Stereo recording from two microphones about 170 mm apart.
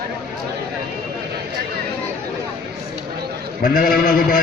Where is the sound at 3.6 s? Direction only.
55° left (ahead or behind).